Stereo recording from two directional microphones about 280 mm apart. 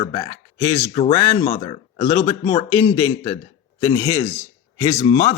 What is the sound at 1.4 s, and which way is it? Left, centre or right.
A man's voice, centre.